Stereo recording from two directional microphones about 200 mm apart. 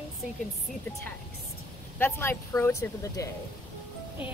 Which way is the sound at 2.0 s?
10° left (ahead or behind).